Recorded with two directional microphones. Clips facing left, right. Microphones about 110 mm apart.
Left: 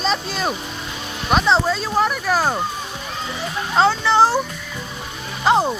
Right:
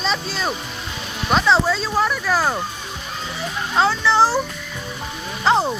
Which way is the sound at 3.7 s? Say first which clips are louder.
Left 2 dB; 30° left (ahead or behind).